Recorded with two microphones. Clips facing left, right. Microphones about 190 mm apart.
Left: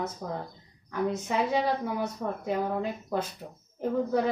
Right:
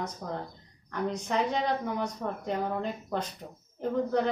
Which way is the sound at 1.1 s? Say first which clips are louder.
Left 1 dB; 5° left (ahead or behind).